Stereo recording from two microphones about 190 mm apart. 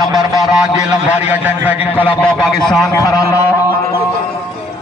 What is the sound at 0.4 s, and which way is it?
A man's voice, 5° right (ahead or behind).